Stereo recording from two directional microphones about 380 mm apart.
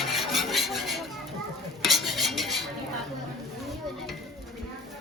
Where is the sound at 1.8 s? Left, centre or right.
Centre.